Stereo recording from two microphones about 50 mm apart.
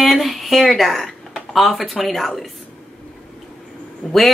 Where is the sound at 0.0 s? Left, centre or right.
Centre.